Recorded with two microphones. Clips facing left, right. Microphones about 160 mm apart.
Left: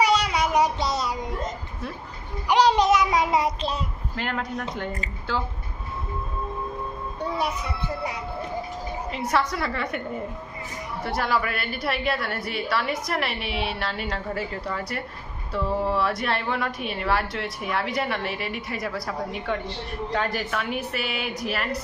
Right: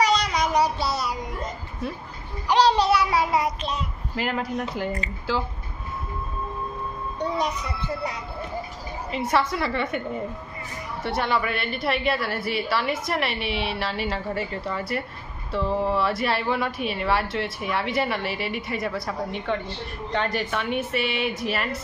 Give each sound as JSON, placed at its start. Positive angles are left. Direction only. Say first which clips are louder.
{"t": 0.0, "sound": "child singing", "louder": "even", "side_deg": 10}
{"t": 2.5, "sound": "child singing", "louder": "even", "side_deg": 15}
{"t": 4.1, "sound": "speech", "louder": "right 3 dB", "side_deg": -5}
{"t": 7.2, "sound": "music", "louder": "right 1 dB", "side_deg": 10}
{"t": 9.1, "sound": "a woman's voice", "louder": "right 2 dB", "side_deg": 0}
{"t": 11.0, "sound": "a woman's voice", "louder": "right 1 dB", "side_deg": 0}